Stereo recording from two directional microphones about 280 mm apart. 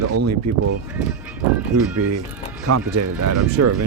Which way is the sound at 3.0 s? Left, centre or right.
Right.